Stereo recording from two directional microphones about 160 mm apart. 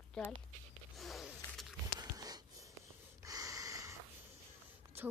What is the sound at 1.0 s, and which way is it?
Zipper, centre (ahead or behind).